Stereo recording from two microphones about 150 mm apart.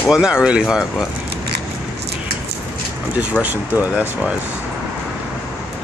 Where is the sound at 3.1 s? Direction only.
10° right (ahead or behind).